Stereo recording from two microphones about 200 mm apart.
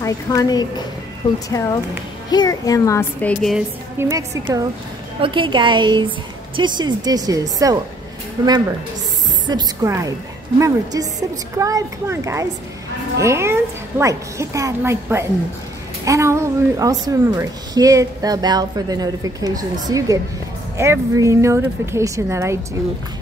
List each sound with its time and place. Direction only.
0.0 s a child's voice: 20° left (ahead or behind)
3.5 s a woman's voice: 15° right (ahead or behind)